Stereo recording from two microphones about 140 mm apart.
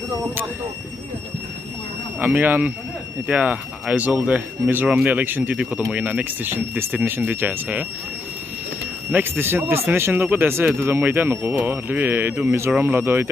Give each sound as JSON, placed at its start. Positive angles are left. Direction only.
{"t": 2.1, "sound": "speech", "side_deg": -10}
{"t": 9.1, "sound": "speech", "side_deg": -15}